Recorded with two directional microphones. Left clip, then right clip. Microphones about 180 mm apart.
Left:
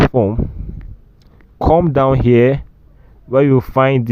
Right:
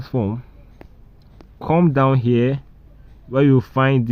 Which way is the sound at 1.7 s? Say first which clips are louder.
Left 4 dB; 50° left (ahead or behind).